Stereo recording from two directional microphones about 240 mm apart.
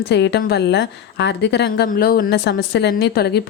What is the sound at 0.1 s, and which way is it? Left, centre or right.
Speech, left.